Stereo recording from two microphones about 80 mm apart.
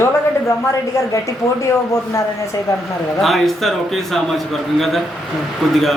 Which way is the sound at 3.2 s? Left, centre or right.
Centre.